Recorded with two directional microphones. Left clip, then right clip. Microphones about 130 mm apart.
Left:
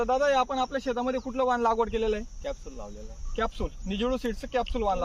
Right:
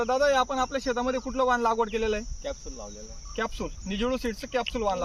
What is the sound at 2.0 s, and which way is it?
Speech, 70° left (ahead or behind).